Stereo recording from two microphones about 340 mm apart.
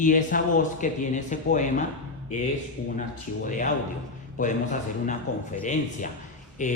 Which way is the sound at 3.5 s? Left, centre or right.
Left.